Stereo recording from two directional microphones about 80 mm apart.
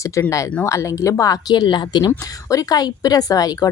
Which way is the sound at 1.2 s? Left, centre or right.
Left.